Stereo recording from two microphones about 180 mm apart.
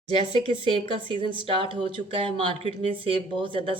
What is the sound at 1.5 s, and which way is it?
Speech, 30° right (ahead or behind).